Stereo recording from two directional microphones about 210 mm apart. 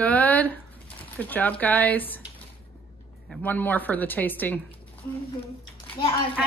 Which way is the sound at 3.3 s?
10° left (ahead or behind).